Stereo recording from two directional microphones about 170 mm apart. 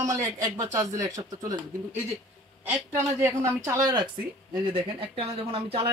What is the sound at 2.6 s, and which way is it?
A woman's voice, 10° right (ahead or behind).